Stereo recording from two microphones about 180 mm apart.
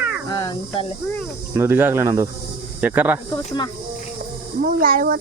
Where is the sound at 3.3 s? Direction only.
25° left (ahead or behind).